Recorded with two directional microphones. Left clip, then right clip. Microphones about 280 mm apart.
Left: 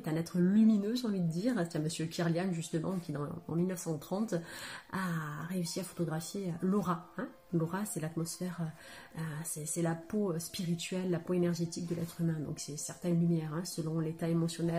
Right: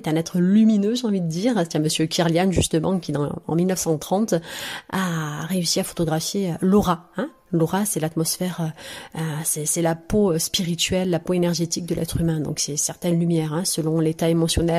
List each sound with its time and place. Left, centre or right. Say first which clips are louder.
0.0 s speech: right 12 dB; right
12.8 s speech: right 8 dB; right